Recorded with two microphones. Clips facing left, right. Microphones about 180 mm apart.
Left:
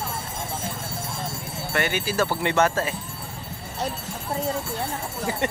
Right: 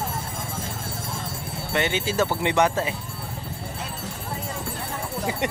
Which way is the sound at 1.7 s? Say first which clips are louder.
Right 1 dB; 20° right (ahead or behind).